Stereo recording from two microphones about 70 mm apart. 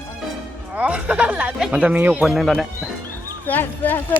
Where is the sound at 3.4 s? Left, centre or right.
Left.